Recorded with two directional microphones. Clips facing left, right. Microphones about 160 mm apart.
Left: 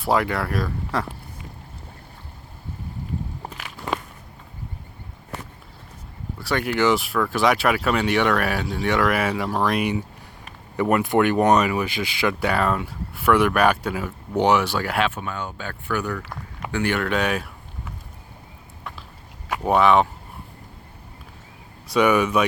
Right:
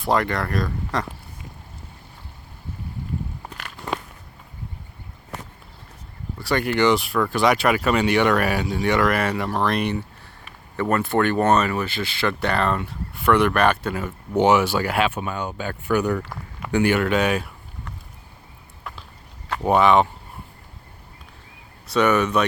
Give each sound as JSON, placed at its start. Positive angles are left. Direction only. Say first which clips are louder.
{"t": 0.0, "sound": "speech", "louder": "even", "side_deg": 5}
{"t": 6.4, "sound": "speech", "louder": "right 1 dB", "side_deg": 0}
{"t": 15.1, "sound": "speech", "louder": "right 3 dB", "side_deg": -15}
{"t": 16.2, "sound": "a sound", "louder": "left 1 dB", "side_deg": 5}
{"t": 16.7, "sound": "speech", "louder": "right 4 dB", "side_deg": -10}
{"t": 19.6, "sound": "speech", "louder": "right 1 dB", "side_deg": 0}
{"t": 21.9, "sound": "speech", "louder": "left 1 dB", "side_deg": 10}